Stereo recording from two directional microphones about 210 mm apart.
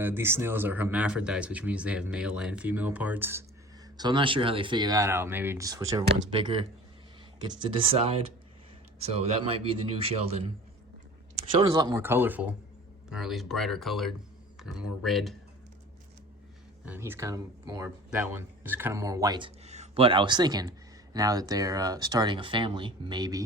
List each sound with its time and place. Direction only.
0.0 s speech: 10° right (ahead or behind)
3.9 s speech: 20° right (ahead or behind); by 15.4 s centre (ahead or behind)
16.8 s speech: 10° right (ahead or behind)
19.6 s speech: 30° right (ahead or behind)